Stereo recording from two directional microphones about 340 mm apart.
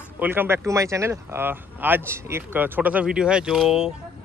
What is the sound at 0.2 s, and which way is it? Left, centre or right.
Speech, centre.